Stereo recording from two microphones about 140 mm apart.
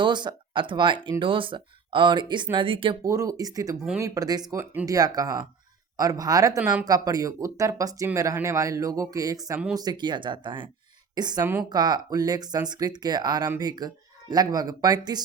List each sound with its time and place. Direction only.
0.0 s speech: 35° right (ahead or behind)
3.0 s speech: 25° right (ahead or behind)
4.5 s speech: 10° right (ahead or behind)
4.9 s speech: 25° right (ahead or behind)